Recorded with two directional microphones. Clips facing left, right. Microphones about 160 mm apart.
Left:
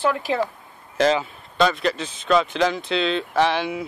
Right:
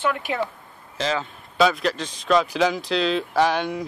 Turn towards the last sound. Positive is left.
turn(degrees=5)  # may be behind; listen again after turning